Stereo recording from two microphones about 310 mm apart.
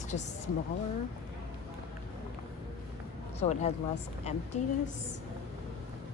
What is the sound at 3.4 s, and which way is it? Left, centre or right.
Speech, left.